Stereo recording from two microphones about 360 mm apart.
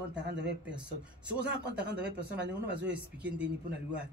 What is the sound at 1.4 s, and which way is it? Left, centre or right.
Speech, right.